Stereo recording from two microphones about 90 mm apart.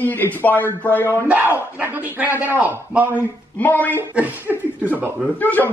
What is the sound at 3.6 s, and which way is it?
Speech, 20° left (ahead or behind).